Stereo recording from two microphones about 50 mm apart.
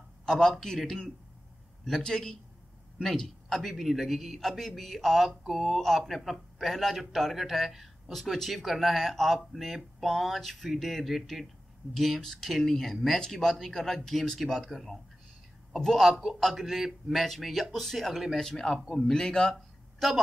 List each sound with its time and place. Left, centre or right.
0.2 s a man's voice: centre
18.4 s a man's voice: centre
19.5 s a sound: centre